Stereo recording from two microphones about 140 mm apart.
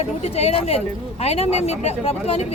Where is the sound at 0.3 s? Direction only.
45° left (ahead or behind).